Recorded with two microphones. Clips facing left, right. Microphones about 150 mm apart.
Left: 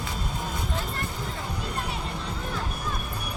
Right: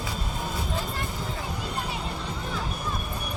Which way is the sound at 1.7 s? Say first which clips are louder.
Even; centre (ahead or behind).